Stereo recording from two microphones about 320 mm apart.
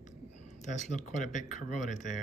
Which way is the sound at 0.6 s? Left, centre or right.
Left.